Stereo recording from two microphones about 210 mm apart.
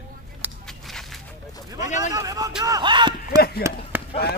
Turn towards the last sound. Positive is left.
turn(degrees=-15)  # may be behind; listen again after turning